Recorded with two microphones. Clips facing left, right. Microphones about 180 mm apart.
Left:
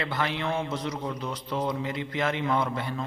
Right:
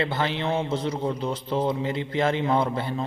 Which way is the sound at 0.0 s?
30° right (ahead or behind).